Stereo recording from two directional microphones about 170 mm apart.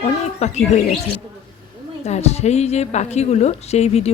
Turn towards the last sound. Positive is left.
turn(degrees=40)  # may be behind; listen again after turning